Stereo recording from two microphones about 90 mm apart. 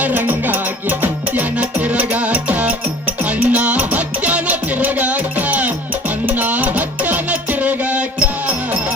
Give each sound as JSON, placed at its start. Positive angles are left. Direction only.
{"t": 0.0, "sound": "music", "side_deg": -20}